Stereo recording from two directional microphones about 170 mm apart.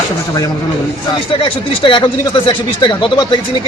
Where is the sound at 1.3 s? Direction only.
30° left (ahead or behind).